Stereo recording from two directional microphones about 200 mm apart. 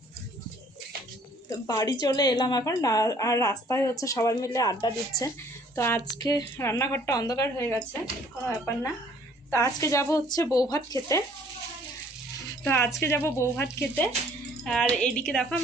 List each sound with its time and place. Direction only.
1.5 s a woman's voice: 20° left (ahead or behind)
12.5 s a woman's voice: 10° left (ahead or behind)